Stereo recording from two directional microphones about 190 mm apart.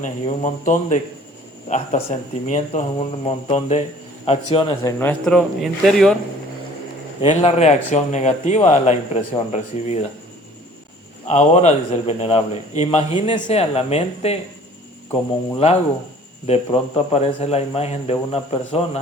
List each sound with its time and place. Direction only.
0.0 s a man's voice: 40° left (ahead or behind); by 6.1 s centre (ahead or behind)
7.2 s a man's voice: 30° left (ahead or behind)
11.3 s a man's voice: 35° left (ahead or behind)
16.5 s a man's voice: 30° left (ahead or behind)